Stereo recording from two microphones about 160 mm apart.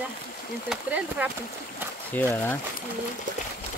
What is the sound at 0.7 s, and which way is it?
Speech, 10° right (ahead or behind).